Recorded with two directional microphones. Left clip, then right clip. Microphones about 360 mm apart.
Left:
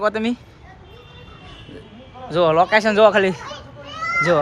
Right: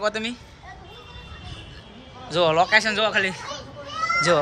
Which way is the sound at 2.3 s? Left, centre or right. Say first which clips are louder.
Left 3 dB; centre.